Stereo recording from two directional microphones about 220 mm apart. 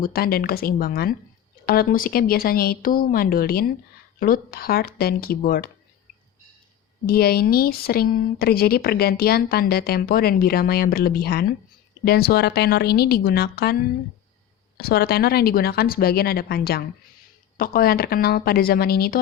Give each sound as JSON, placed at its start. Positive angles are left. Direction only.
{"t": 0.0, "sound": "speech", "side_deg": 45}
{"t": 7.1, "sound": "speech", "side_deg": 45}
{"t": 14.8, "sound": "speech", "side_deg": 45}